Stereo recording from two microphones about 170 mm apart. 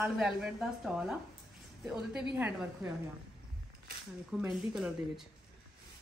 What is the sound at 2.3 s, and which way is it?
Speech, 10° right (ahead or behind).